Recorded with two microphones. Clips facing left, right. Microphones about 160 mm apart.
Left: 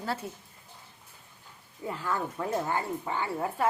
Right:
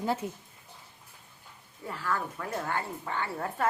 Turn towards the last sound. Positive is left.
turn(degrees=10)  # may be behind; listen again after turning